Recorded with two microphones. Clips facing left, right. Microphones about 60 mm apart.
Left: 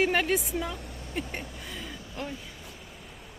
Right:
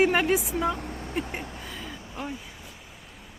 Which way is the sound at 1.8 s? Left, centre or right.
Right.